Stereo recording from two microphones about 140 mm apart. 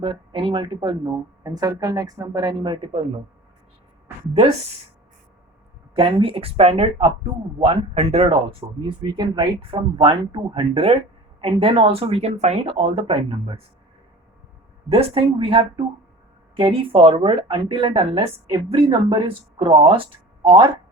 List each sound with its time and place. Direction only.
0.0 s a woman's voice: 35° right (ahead or behind)
5.9 s speech: 40° right (ahead or behind)
14.8 s speech: 40° right (ahead or behind)